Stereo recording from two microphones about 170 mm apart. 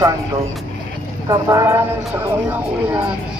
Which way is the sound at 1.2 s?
20° right (ahead or behind).